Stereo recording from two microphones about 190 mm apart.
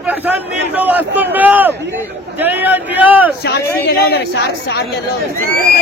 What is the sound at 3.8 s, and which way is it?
Speech, 60° left (ahead or behind).